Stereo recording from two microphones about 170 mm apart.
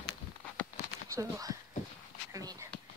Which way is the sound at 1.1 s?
20° right (ahead or behind).